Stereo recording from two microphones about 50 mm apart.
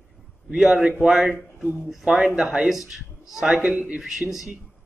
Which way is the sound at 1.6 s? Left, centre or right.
Right.